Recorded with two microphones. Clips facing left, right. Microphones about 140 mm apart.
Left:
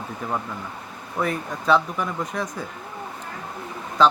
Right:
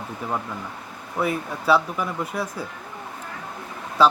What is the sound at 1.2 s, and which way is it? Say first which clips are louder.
Speech: right 1 dB; 5° right (ahead or behind).